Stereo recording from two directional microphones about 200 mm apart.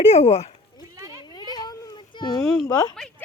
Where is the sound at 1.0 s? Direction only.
15° right (ahead or behind).